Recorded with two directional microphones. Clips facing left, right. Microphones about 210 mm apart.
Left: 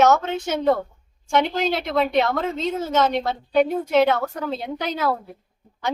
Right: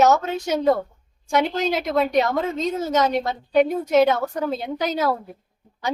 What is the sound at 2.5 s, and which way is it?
Speech, 40° right (ahead or behind).